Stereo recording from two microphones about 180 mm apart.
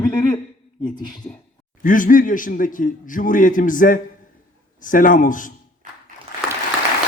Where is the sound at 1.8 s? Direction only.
50° left (ahead or behind).